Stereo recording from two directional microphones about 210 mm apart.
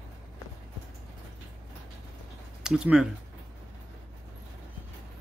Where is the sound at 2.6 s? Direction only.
5° right (ahead or behind).